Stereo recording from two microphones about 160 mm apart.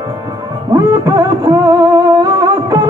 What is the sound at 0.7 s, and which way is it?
Music, 20° right (ahead or behind).